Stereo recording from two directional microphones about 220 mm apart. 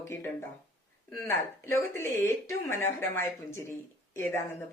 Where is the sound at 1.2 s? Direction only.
10° left (ahead or behind).